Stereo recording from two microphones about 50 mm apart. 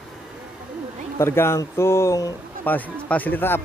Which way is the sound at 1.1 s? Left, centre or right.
Left.